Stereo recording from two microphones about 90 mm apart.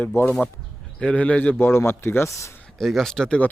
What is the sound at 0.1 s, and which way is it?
Speech, 30° left (ahead or behind).